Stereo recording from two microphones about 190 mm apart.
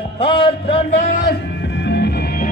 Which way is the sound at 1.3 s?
70° left (ahead or behind).